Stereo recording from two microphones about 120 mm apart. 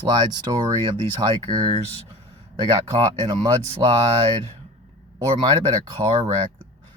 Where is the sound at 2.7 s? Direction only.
40° right (ahead or behind).